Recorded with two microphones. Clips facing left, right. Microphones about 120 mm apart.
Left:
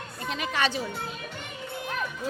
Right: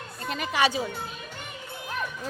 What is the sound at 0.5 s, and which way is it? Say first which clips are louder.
Speech: right 4 dB; 10° right (ahead or behind).